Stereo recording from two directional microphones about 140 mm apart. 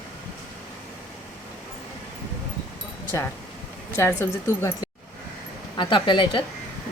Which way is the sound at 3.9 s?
15° left (ahead or behind).